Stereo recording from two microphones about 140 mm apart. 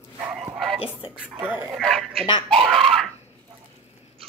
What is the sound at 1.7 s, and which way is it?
Speech, centre (ahead or behind).